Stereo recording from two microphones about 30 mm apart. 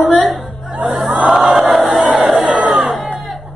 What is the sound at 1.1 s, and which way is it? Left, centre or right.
Crowd, right.